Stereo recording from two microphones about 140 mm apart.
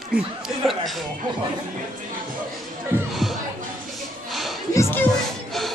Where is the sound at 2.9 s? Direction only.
15° right (ahead or behind).